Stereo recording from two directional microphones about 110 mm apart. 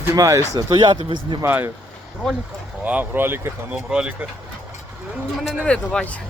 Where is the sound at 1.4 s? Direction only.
20° right (ahead or behind).